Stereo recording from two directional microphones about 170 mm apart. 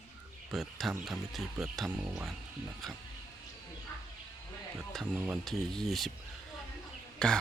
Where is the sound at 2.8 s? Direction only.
Centre (ahead or behind).